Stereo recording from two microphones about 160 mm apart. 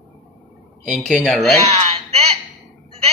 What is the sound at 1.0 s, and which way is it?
Speech, 5° left (ahead or behind).